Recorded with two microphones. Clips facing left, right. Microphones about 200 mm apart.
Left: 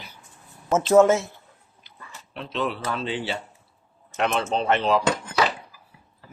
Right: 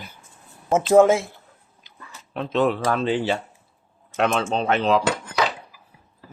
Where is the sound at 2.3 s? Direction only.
50° right (ahead or behind).